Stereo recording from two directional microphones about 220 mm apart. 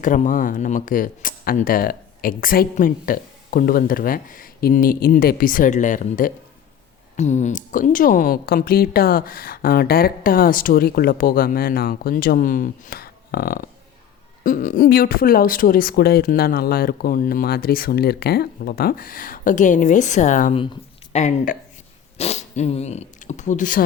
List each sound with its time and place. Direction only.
0.0 s a woman's voice: 35° left (ahead or behind)